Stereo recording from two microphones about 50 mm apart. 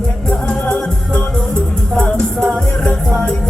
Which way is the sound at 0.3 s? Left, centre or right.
Left.